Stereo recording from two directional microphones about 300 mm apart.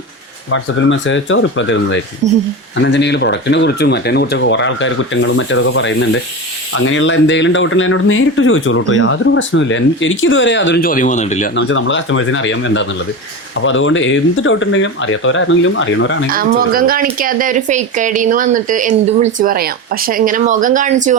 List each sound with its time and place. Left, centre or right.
0.5 s speech: left
2.2 s speech: right
2.7 s speech: left
11.5 s speech: left
16.3 s speech: right